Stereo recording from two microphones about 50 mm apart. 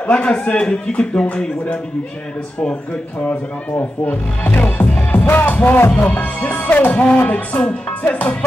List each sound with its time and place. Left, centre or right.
0.0 s a man's voice: left
4.0 s speech: left